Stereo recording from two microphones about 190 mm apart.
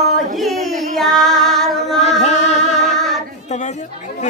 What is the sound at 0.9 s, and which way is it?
Female singing, centre (ahead or behind).